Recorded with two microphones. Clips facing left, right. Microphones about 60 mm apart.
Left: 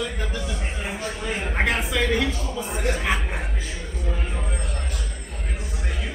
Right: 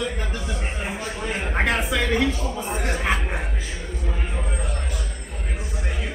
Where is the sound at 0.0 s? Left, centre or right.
Centre.